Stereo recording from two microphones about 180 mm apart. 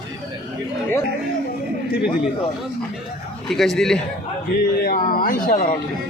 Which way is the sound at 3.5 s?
Centre (ahead or behind).